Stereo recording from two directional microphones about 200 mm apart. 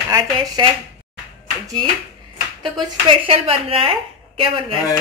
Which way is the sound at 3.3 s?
30° right (ahead or behind).